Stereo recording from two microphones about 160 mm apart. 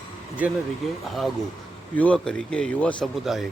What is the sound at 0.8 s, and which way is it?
Speech, centre (ahead or behind).